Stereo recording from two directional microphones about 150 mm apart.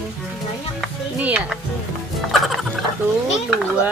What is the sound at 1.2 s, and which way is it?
Speech, 10° right (ahead or behind).